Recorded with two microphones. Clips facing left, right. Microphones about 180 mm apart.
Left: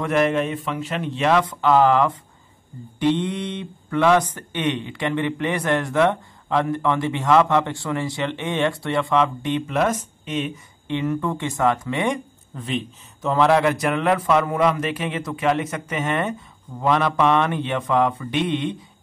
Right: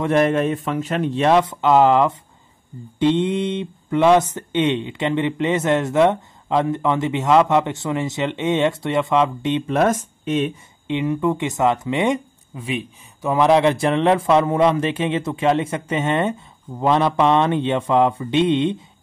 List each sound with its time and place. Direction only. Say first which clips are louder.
0.0 s a man's voice: right 3 dB; 35° right (ahead or behind)
1.3 s speech: right 2 dB; 25° right (ahead or behind)
9.7 s a man's voice: right 5 dB; 45° right (ahead or behind)
10.9 s speech: right 3 dB; 15° right (ahead or behind)